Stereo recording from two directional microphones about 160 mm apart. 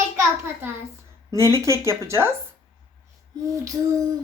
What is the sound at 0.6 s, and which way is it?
Speech, 10° right (ahead or behind).